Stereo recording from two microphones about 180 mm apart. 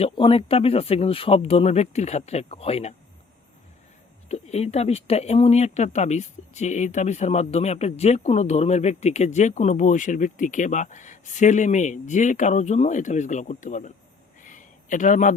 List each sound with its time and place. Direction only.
0.0 s speech: 30° left (ahead or behind)
4.3 s speech: 35° left (ahead or behind)
14.4 s a sound: 45° left (ahead or behind)